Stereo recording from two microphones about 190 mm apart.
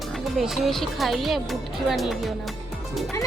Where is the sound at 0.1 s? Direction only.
Centre (ahead or behind).